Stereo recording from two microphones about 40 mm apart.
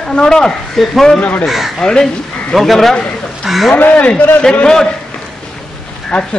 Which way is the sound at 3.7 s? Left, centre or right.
Left.